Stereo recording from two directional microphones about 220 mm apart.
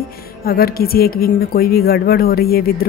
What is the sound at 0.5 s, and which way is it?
A woman's voice, 45° left (ahead or behind).